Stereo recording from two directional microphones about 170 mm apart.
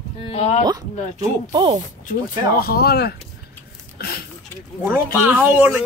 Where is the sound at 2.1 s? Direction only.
65° left (ahead or behind).